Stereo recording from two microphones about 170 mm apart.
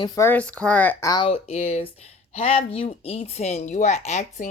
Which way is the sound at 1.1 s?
30° left (ahead or behind).